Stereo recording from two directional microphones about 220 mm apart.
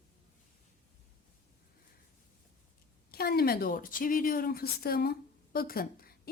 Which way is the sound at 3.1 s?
45° left (ahead or behind).